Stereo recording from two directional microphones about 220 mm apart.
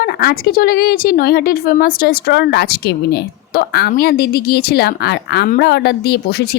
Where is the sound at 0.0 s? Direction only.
45° left (ahead or behind).